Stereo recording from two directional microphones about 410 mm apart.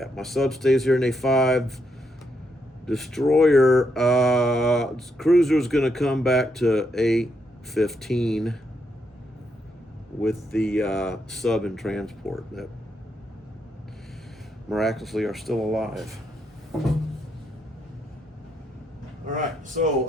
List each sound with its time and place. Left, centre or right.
0.0 s speech: centre
2.8 s speech: centre
10.2 s speech: centre
14.7 s speech: centre
19.3 s speech: centre